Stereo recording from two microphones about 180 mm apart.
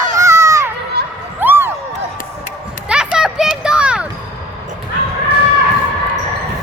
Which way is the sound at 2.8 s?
5° right (ahead or behind).